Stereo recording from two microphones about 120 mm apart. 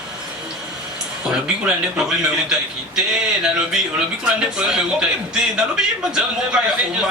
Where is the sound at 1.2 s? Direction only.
10° right (ahead or behind).